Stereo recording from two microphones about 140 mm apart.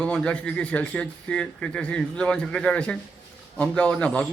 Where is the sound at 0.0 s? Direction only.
5° left (ahead or behind).